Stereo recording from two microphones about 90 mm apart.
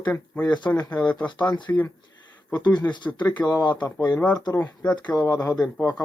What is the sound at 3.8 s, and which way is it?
Speech, 35° left (ahead or behind).